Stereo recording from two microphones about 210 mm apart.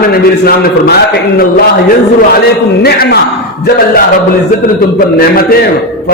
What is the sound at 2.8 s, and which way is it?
Speech, 50° left (ahead or behind).